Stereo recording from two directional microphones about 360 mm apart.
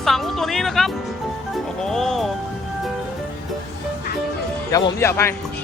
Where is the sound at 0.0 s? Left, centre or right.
Centre.